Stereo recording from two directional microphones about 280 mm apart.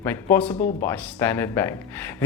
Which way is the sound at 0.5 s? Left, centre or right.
Left.